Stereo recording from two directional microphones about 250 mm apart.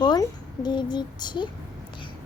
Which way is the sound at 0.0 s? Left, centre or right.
Centre.